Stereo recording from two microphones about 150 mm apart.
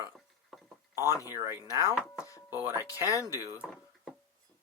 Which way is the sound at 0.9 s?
20° left (ahead or behind).